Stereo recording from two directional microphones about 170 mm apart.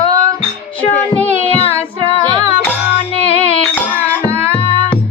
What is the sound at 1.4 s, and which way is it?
Child singing, 35° left (ahead or behind).